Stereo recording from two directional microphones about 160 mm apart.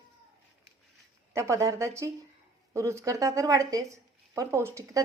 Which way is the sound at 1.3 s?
20° right (ahead or behind).